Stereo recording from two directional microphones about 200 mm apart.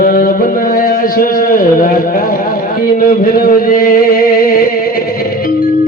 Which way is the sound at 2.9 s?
45° left (ahead or behind).